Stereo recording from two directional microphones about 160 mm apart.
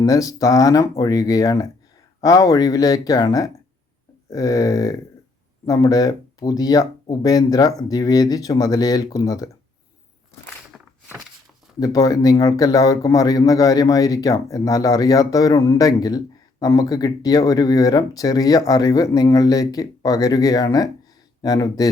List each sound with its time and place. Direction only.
0.0 s speech: 20° left (ahead or behind)
10.7 s walk: centre (ahead or behind)
11.8 s speech: 25° left (ahead or behind)